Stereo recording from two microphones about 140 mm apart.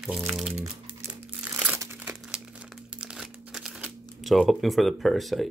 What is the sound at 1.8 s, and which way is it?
Crumpling, 15° right (ahead or behind).